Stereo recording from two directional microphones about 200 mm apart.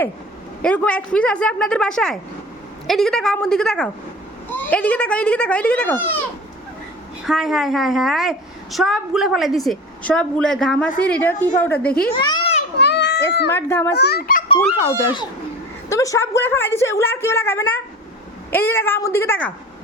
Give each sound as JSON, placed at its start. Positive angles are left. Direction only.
{"t": 0.6, "sound": "a woman's voice", "side_deg": 5}
{"t": 7.3, "sound": "a woman's voice", "side_deg": 0}
{"t": 12.1, "sound": "a child's voice", "side_deg": 20}
{"t": 12.7, "sound": "a sound", "side_deg": 60}
{"t": 13.5, "sound": "a woman's voice", "side_deg": 10}
{"t": 13.9, "sound": "a child's voice", "side_deg": 55}
{"t": 14.4, "sound": "a child's voice", "side_deg": 25}